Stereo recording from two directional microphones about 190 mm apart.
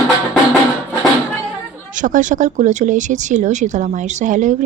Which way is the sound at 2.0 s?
45° right (ahead or behind).